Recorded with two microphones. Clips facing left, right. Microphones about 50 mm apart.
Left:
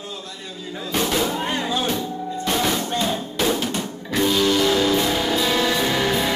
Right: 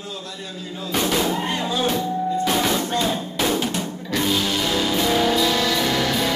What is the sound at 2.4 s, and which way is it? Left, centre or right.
Music, centre.